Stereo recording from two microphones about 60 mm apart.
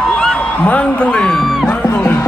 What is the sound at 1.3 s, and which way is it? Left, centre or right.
Speech, centre.